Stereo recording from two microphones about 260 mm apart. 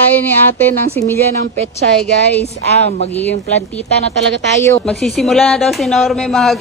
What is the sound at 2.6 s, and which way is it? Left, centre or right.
Speech, right.